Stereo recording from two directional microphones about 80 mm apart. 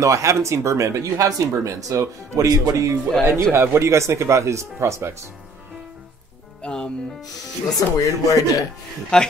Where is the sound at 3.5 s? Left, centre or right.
Right.